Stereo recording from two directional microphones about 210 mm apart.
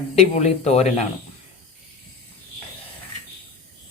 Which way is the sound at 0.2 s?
30° left (ahead or behind).